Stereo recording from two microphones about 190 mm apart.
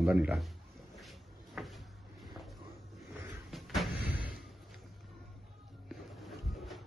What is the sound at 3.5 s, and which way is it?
Vehicle, 5° right (ahead or behind).